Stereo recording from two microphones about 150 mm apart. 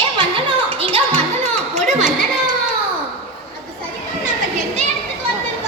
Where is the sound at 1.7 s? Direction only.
50° right (ahead or behind).